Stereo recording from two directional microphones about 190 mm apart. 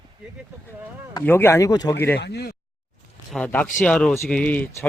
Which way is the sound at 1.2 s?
10° left (ahead or behind).